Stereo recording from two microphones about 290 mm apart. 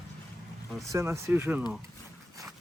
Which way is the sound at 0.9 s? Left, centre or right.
Centre.